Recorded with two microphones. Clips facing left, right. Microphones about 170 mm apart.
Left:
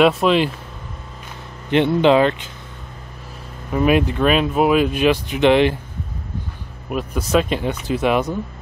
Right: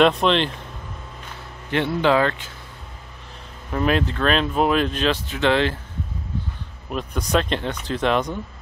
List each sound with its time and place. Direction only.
0.0 s speech: 5° left (ahead or behind)
1.7 s speech: 20° left (ahead or behind)
3.7 s speech: 10° left (ahead or behind)
6.9 s speech: 5° left (ahead or behind)